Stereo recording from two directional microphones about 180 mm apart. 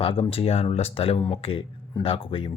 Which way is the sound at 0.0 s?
30° left (ahead or behind).